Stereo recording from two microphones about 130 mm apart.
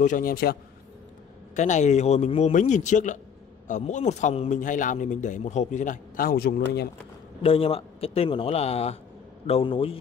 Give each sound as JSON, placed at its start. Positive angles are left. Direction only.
{"t": 0.0, "sound": "a man's voice", "side_deg": 80}
{"t": 1.5, "sound": "a man's voice", "side_deg": 65}
{"t": 7.4, "sound": "a man's voice", "side_deg": 45}